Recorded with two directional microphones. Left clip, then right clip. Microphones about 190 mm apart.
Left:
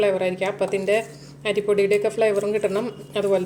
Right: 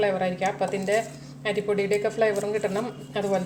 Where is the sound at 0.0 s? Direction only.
30° left (ahead or behind).